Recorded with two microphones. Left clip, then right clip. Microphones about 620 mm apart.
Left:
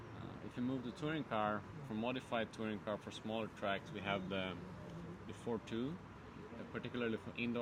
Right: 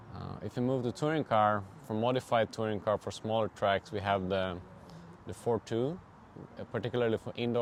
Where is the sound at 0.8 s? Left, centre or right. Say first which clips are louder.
Right 11 dB; right.